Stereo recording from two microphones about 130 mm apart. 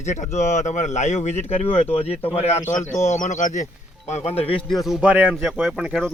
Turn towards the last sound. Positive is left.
turn(degrees=-5)  # may be behind; listen again after turning